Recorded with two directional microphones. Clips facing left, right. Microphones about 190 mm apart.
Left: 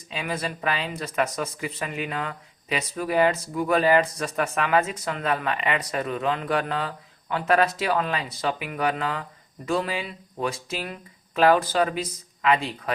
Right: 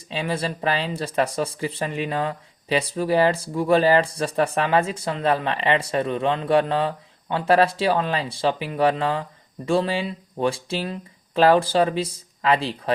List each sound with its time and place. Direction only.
0.1 s speech: 30° right (ahead or behind)